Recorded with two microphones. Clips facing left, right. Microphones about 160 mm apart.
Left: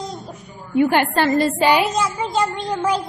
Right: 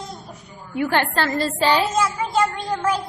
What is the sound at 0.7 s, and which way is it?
A woman's voice, 15° left (ahead or behind).